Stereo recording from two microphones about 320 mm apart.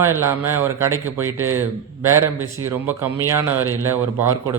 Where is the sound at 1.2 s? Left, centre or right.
Right.